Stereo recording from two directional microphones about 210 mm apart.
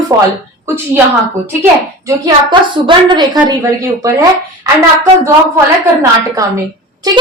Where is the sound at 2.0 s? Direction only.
20° right (ahead or behind).